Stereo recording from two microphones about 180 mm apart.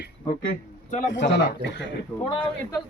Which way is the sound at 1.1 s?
80° left.